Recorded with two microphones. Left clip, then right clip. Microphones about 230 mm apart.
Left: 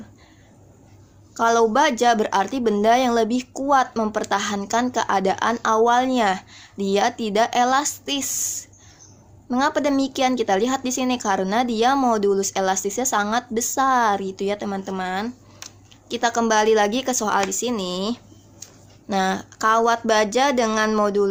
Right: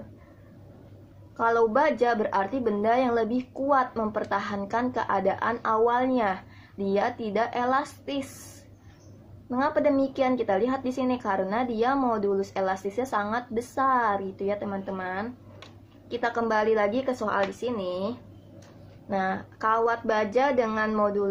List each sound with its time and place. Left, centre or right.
1.4 s speech: left
9.5 s speech: left